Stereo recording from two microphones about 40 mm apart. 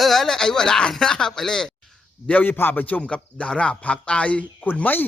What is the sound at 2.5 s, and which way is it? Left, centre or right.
Speech, left.